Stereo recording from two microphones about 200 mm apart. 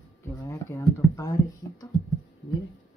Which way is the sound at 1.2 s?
15° left (ahead or behind).